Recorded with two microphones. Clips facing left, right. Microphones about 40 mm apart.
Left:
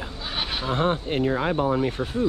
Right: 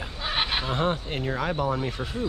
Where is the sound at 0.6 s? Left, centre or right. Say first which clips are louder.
Left 3 dB; left.